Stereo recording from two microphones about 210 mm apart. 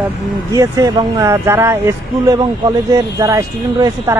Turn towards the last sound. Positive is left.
turn(degrees=-15)  # may be behind; listen again after turning